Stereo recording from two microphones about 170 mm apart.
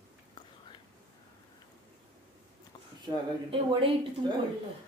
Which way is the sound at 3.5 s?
30° right (ahead or behind).